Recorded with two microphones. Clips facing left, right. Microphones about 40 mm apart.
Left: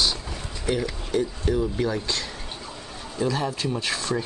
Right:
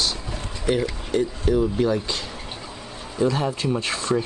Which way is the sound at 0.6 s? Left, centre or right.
Centre.